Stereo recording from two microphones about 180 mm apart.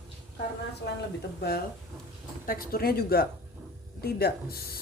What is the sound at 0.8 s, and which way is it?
A woman's voice, 70° left (ahead or behind).